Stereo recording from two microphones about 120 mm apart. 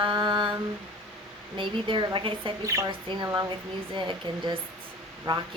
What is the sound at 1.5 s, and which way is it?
Speech, 45° right (ahead or behind).